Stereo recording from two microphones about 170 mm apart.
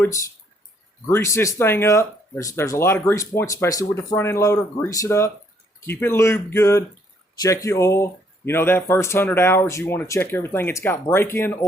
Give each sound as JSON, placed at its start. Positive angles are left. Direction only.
{"t": 0.0, "sound": "speech", "side_deg": 20}